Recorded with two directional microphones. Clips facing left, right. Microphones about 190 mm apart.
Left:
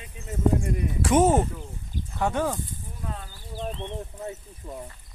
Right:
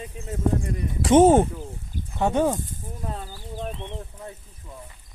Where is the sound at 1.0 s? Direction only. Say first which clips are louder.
Right 5 dB; 25° right (ahead or behind).